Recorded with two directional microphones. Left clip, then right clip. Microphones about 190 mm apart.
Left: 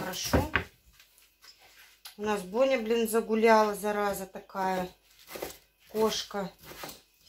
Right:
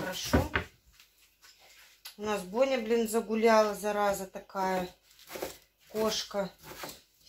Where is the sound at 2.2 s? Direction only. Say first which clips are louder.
Left 2 dB; 25° left (ahead or behind).